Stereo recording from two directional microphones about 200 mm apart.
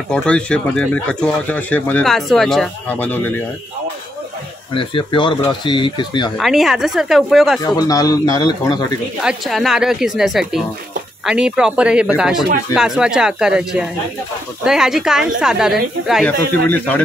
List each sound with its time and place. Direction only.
0.1 s speech: 5° left (ahead or behind)
4.7 s speech: 25° left (ahead or behind)
6.3 s speech: centre (ahead or behind)
7.6 s speech: 20° left (ahead or behind)
9.2 s speech: centre (ahead or behind)
16.3 s speech: 10° left (ahead or behind)